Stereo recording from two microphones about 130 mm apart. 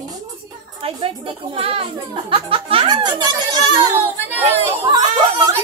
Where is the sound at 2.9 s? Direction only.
30° right (ahead or behind).